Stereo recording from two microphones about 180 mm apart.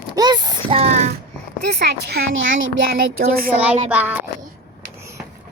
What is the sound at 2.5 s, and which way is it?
Speech, 90° right.